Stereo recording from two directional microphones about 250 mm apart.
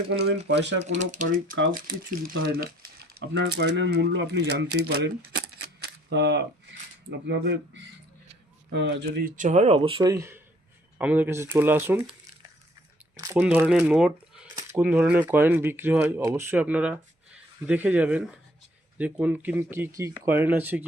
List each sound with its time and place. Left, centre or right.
0.1 s speech: right
0.9 s speech: right
1.3 s speech: right
1.9 s speech: right
5.8 s camera: right
7.3 s speech: right; by 12.1 s centre
13.1 s speech: centre